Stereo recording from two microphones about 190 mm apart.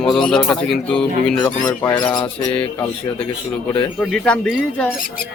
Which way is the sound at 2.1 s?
25° left (ahead or behind).